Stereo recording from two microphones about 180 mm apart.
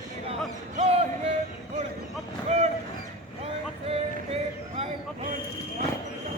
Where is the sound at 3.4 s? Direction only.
35° right (ahead or behind).